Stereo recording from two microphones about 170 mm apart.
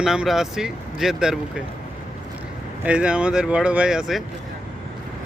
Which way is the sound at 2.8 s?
5° right (ahead or behind).